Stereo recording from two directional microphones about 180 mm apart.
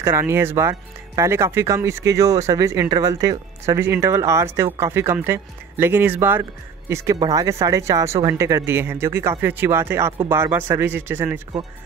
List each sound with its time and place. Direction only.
0.0 s speech: 15° right (ahead or behind)